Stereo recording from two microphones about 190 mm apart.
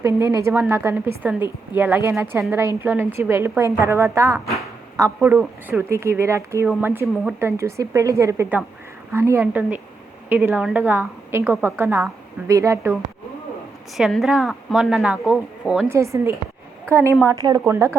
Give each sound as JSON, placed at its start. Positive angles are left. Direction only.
{"t": 0.0, "sound": "a woman's voice", "side_deg": -15}
{"t": 13.9, "sound": "a woman's voice", "side_deg": 0}